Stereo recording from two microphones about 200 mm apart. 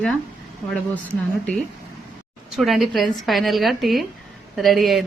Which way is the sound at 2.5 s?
Centre (ahead or behind).